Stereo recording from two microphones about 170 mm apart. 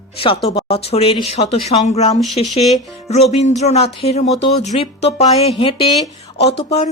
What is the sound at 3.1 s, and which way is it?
Speech, 40° left (ahead or behind).